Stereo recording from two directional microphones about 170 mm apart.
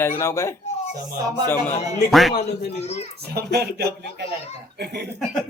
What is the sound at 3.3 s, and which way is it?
Speech, 70° right (ahead or behind).